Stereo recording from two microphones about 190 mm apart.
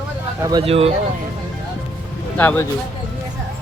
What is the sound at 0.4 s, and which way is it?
Speech, 25° right (ahead or behind).